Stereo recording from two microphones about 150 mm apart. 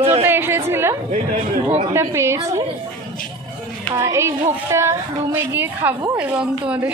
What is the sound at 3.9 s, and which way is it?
A woman's voice, 20° right (ahead or behind).